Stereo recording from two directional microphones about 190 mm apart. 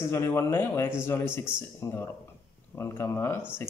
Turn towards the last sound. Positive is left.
turn(degrees=15)  # may be behind; listen again after turning